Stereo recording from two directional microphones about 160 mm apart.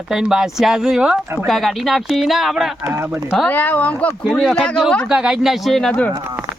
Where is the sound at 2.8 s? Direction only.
15° right (ahead or behind).